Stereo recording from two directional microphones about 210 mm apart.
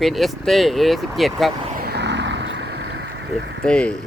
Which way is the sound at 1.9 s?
55° right (ahead or behind).